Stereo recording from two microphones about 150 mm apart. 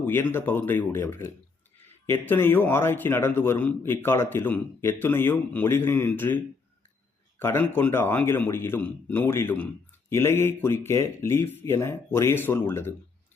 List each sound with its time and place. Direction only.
0.0 s a man's voice: 15° left (ahead or behind)